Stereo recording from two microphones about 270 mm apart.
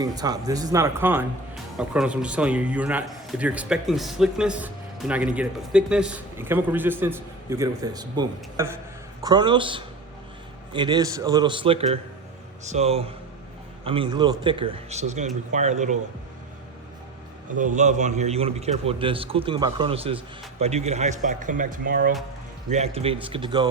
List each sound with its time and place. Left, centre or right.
0.0 s a man's voice: centre
17.7 s a man's voice: right